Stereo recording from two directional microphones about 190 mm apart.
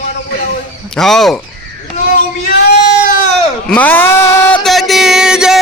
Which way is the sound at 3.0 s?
45° left (ahead or behind).